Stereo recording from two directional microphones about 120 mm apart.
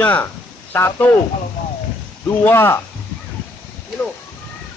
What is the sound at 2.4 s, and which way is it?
Speech, 20° left (ahead or behind).